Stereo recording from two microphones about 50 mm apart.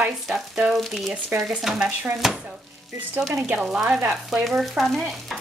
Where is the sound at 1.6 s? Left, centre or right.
Centre.